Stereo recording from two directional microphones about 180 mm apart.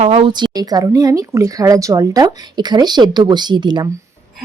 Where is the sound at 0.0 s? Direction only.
35° right (ahead or behind).